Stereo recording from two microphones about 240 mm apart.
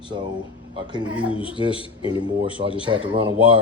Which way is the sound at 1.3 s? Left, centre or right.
Left.